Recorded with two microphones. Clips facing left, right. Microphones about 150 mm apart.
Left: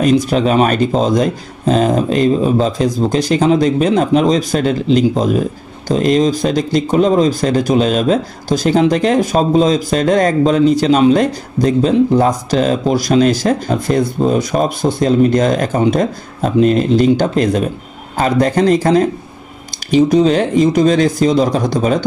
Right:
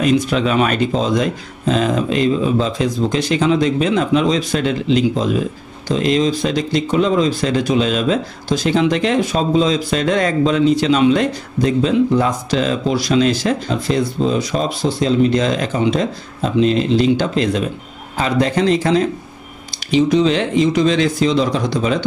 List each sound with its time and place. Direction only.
0.0 s speech: 40° left (ahead or behind)